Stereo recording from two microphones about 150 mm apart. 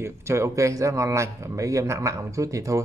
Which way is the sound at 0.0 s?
20° right (ahead or behind).